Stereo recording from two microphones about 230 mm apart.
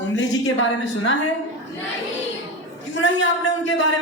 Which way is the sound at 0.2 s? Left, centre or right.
Left.